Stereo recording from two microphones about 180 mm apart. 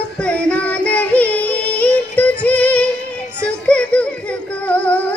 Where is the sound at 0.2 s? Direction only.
5° left (ahead or behind).